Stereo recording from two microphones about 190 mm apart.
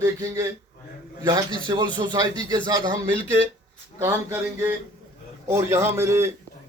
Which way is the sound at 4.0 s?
10° right (ahead or behind).